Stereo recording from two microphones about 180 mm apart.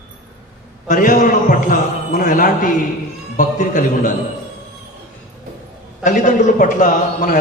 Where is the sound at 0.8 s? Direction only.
45° left (ahead or behind).